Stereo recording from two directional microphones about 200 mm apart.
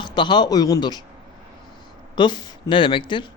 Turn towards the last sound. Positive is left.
turn(degrees=25)  # may be behind; listen again after turning